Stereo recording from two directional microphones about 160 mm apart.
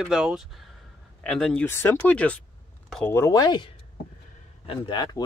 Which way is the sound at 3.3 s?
25° left (ahead or behind).